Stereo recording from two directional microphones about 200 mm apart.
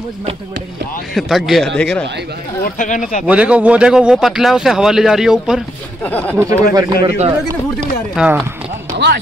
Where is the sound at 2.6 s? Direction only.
40° left (ahead or behind).